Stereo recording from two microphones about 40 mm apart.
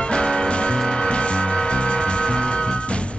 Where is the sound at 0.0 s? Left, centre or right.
Left.